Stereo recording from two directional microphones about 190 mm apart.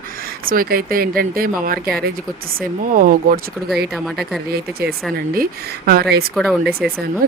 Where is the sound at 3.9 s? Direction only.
Centre (ahead or behind).